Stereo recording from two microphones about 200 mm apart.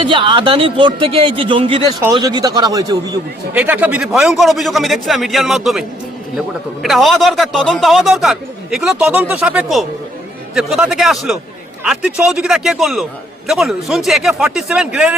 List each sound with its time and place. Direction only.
0.0 s a man's voice: 25° right (ahead or behind)
3.5 s speech: 10° right (ahead or behind)
6.8 s speech: centre (ahead or behind)